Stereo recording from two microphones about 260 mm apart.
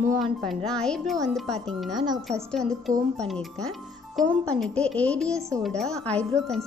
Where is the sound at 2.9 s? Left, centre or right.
Right.